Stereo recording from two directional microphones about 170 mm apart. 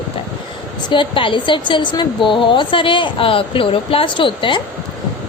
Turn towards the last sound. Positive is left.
turn(degrees=30)  # may be behind; listen again after turning